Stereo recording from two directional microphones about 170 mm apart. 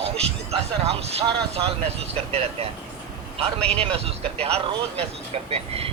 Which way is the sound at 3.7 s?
35° right (ahead or behind).